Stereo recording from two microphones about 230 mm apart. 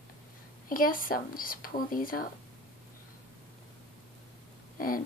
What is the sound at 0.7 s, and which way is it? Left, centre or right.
A woman's voice, left.